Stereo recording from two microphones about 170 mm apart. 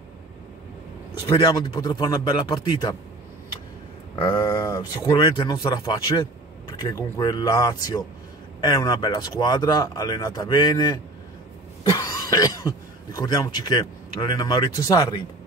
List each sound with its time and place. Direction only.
1.2 s speech: 25° left (ahead or behind)
4.1 s speech: 25° left (ahead or behind)